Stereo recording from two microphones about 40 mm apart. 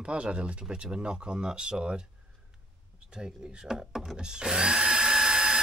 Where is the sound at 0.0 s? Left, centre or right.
Right.